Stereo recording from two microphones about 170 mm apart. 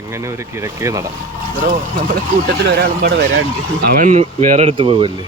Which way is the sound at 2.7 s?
70° right (ahead or behind).